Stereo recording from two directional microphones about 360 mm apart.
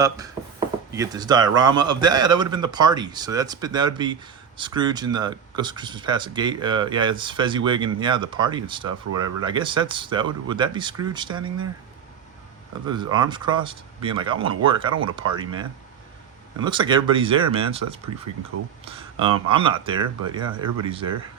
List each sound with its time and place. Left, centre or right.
0.9 s speech: centre
12.9 s speech: centre
18.5 s speech: right
19.2 s speech: centre